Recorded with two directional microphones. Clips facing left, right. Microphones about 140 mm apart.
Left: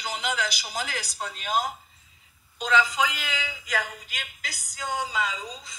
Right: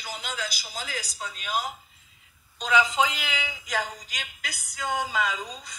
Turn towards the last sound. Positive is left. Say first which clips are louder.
# right 1 dB
turn(degrees=-50)  # may be behind; listen again after turning